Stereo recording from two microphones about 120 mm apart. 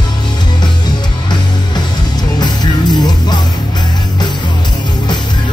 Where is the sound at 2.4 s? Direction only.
35° left (ahead or behind).